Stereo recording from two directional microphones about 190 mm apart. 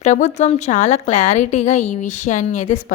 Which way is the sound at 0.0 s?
35° left (ahead or behind).